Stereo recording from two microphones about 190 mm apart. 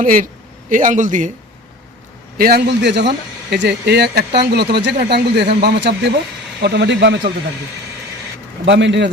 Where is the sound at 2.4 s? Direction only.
60° right (ahead or behind).